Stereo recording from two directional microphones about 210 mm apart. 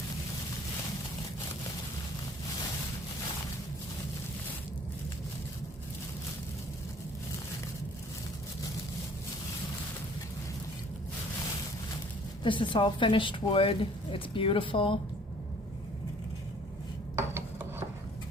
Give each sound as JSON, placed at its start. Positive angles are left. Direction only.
{"t": 12.4, "sound": "a woman's voice", "side_deg": 20}
{"t": 17.2, "sound": "filing", "side_deg": -10}